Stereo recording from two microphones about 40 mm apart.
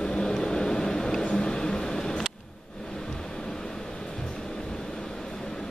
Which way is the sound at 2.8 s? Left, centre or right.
Centre.